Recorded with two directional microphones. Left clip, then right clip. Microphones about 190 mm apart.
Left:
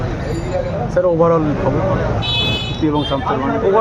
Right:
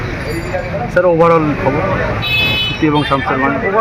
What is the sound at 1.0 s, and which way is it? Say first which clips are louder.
Speech: right 4 dB; 40° right (ahead or behind).